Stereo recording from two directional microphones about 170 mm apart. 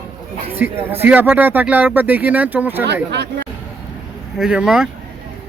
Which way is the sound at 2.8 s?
85° right.